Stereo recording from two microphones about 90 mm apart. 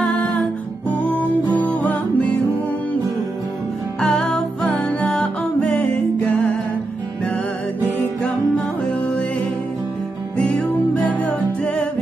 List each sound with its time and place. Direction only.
0.0 s music: 15° left (ahead or behind)
4.0 s music: 10° left (ahead or behind)
8.2 s music: 10° left (ahead or behind)
10.3 s music: 15° left (ahead or behind)